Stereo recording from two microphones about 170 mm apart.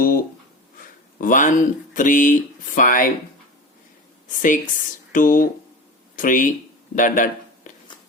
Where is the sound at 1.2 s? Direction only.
50° left (ahead or behind).